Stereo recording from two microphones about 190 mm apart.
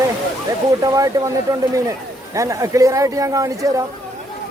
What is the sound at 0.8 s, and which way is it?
Speech, 15° right (ahead or behind).